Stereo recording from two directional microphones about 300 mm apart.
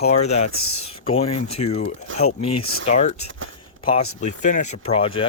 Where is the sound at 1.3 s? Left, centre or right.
Left.